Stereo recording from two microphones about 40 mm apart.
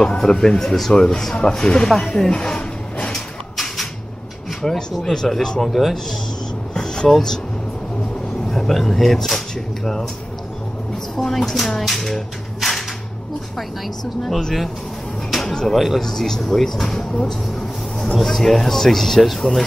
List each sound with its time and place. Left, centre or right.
0.0 s speech: centre
2.1 s a sound: left
3.5 s a sound: centre
4.6 s speech: centre
6.7 s a sound: centre
7.1 s speech: centre
8.5 s speech: centre
11.1 s speech: centre
15.4 s a sound: centre
15.7 s speech: centre
16.0 s speech: centre
17.3 s vehicle: centre
18.3 s speech: centre